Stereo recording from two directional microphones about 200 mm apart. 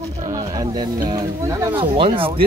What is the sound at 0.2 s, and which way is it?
Snake, 20° right (ahead or behind).